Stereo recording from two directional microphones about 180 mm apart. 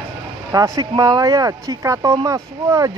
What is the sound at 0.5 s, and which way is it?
Speech, 20° right (ahead or behind).